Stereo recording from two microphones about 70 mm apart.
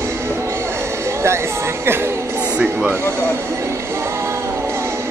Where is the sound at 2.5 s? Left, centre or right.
Centre.